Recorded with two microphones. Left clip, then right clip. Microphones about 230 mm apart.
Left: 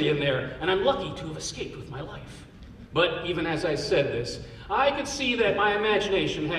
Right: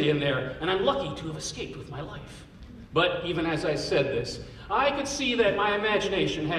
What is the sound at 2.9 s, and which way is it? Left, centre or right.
A man's voice, left.